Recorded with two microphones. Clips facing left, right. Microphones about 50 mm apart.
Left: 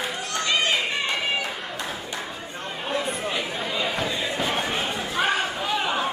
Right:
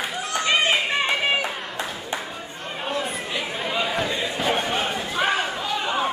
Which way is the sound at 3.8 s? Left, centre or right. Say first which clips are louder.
Right 1 dB; centre.